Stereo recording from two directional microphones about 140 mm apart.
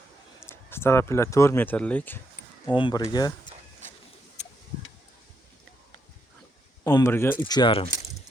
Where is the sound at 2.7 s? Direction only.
35° left (ahead or behind).